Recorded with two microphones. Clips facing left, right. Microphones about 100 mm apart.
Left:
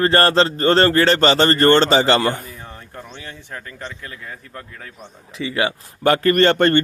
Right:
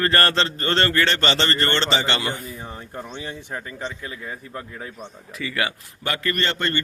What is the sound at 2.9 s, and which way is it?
Speech, 15° right (ahead or behind).